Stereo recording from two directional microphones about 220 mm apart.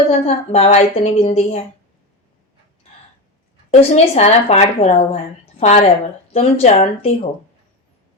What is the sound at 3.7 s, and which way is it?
Speech, 30° left (ahead or behind).